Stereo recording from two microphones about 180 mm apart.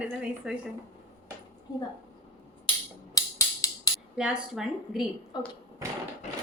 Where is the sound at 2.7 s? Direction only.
30° left (ahead or behind).